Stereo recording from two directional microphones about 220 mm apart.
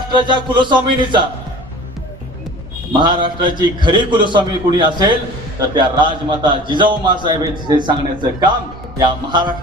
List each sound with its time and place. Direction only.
0.1 s a man's voice: 20° right (ahead or behind)
3.2 s a man's voice: 20° right (ahead or behind)